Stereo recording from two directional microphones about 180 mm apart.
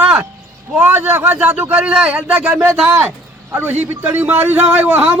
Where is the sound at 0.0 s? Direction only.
10° right (ahead or behind).